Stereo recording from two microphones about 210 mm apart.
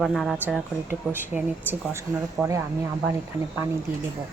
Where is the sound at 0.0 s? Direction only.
Centre (ahead or behind).